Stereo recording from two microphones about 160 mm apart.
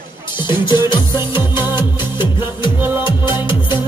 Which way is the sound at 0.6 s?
30° left (ahead or behind).